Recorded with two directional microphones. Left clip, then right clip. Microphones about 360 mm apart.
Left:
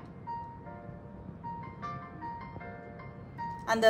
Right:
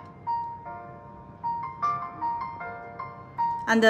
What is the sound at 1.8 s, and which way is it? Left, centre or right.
Music, centre.